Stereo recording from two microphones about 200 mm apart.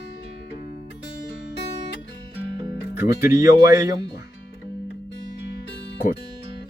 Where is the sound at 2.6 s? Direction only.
15° right (ahead or behind).